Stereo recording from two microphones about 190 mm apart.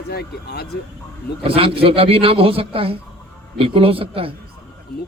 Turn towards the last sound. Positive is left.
turn(degrees=-30)  # may be behind; listen again after turning